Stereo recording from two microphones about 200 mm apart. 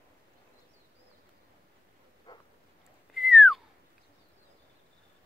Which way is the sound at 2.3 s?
20° left (ahead or behind).